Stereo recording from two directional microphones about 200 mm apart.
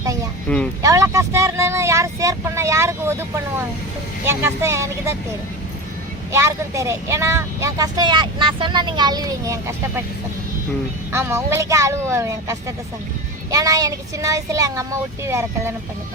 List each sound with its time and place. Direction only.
0.4 s speech: 5° left (ahead or behind)
0.8 s vehicle: 15° right (ahead or behind)
4.3 s speech: 15° right (ahead or behind)
6.3 s speech: 15° right (ahead or behind)
11.1 s speech: 15° right (ahead or behind)